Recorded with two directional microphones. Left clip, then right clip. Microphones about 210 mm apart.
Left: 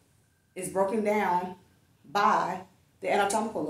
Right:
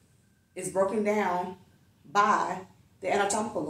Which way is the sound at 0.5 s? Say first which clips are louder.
Right 1 dB; 20° left (ahead or behind).